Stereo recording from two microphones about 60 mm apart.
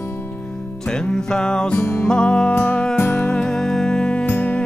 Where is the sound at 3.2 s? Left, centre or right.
Centre.